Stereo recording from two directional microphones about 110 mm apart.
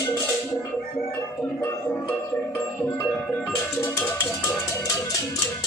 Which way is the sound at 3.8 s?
25° left (ahead or behind).